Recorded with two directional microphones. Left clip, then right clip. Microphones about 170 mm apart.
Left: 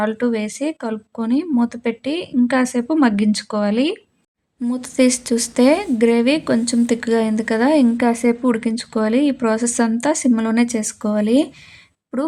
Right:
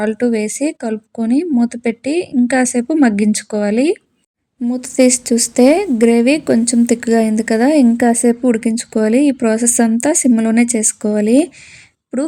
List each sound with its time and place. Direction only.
0.0 s a woman's voice: 40° right (ahead or behind)